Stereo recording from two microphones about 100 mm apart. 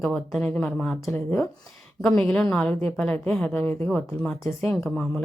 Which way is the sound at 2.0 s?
5° left (ahead or behind).